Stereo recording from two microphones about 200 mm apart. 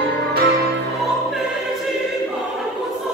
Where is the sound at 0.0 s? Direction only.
55° right (ahead or behind).